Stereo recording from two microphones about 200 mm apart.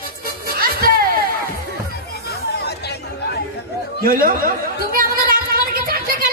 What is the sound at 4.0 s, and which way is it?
Chatter, 45° right (ahead or behind).